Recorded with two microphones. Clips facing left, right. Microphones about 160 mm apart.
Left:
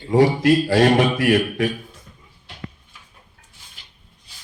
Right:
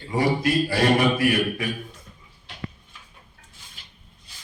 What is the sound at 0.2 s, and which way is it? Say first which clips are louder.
Speech: left 6 dB; 90° left.